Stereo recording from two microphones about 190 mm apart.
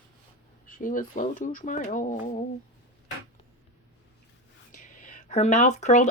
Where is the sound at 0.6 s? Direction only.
45° left (ahead or behind).